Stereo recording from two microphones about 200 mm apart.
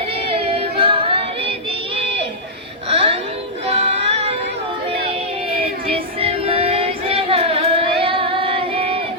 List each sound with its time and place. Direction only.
0.3 s singing: 25° right (ahead or behind)
2.9 s a sound: 30° right (ahead or behind)
3.7 s music: 30° right (ahead or behind)
6.1 s music: 30° right (ahead or behind)